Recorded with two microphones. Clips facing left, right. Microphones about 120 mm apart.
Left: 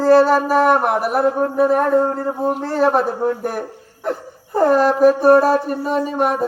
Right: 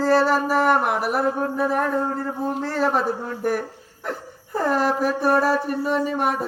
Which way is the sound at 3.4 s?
45° left (ahead or behind).